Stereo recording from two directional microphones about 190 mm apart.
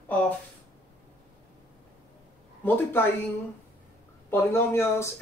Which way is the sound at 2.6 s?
10° left (ahead or behind).